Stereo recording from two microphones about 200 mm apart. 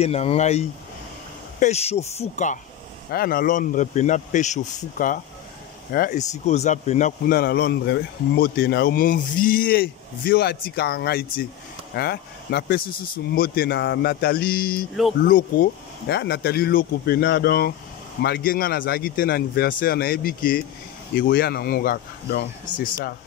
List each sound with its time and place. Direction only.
0.0 s a man's voice: 30° left (ahead or behind)
3.1 s a man's voice: 45° left (ahead or behind)